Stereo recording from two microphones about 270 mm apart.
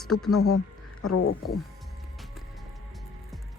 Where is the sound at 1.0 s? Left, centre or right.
Left.